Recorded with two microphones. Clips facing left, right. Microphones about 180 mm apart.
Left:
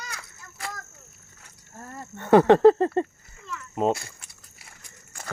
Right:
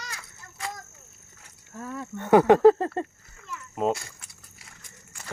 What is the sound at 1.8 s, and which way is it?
Speech, 90° right.